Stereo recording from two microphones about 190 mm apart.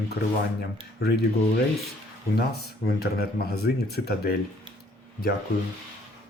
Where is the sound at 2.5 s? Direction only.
55° left (ahead or behind).